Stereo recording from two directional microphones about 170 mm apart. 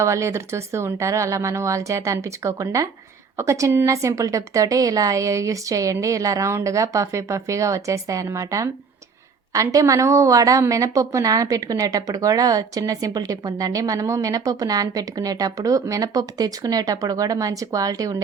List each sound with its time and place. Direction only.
0.0 s a woman's voice: 15° right (ahead or behind)